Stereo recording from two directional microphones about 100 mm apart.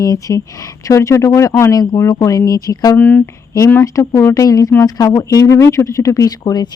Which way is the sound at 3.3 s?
30° left (ahead or behind).